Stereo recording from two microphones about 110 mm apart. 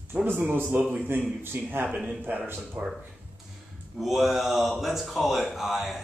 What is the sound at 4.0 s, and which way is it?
Speech, centre (ahead or behind).